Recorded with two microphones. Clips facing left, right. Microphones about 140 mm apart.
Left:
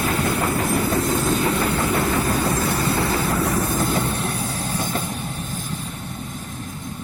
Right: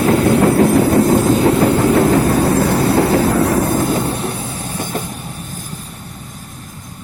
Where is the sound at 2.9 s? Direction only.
70° right (ahead or behind); by 4.0 s 50° right (ahead or behind).